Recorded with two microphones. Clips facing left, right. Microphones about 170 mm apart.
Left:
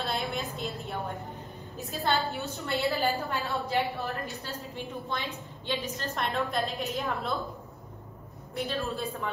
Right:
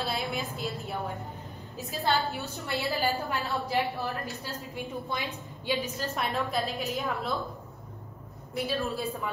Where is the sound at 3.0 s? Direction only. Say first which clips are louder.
Even; 5° right (ahead or behind).